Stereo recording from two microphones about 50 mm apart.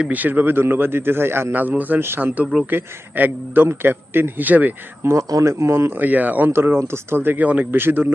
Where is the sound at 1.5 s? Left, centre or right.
Right.